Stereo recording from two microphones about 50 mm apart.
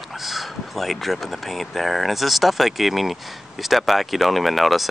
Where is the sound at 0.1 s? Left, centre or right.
Centre.